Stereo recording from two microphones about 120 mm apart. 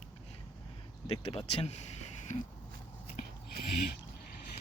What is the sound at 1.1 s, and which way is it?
Speech, 50° left (ahead or behind).